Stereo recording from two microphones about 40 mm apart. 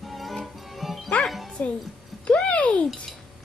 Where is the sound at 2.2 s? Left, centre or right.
Left.